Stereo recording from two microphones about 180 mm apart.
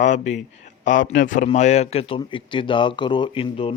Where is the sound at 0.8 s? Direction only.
90° left.